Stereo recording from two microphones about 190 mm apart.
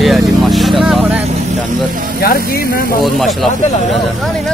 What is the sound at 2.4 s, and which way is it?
Speech, 50° left (ahead or behind).